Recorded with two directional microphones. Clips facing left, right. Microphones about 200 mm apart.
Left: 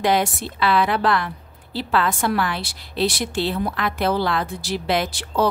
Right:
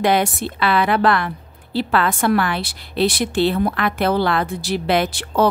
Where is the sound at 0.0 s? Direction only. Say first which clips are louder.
Right 2 dB; 60° right (ahead or behind).